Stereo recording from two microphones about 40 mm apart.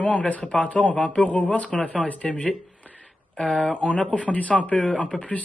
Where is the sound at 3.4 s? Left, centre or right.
Left.